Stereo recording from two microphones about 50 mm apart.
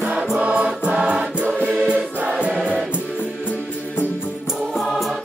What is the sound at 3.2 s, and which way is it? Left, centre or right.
Music, left.